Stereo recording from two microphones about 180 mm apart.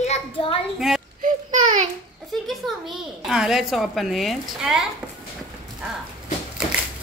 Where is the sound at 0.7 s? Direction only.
5° right (ahead or behind).